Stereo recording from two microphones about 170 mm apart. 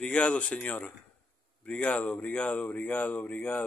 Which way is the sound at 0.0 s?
5° left (ahead or behind).